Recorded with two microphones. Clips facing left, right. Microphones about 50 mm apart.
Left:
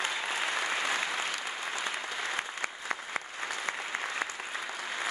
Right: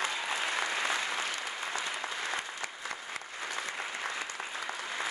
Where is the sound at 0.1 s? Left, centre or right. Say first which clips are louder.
Left 1 dB; centre.